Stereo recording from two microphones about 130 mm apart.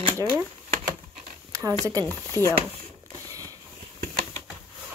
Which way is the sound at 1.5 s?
25° right (ahead or behind).